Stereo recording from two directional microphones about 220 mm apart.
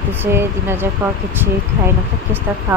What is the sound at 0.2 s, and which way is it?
Speech, 10° right (ahead or behind).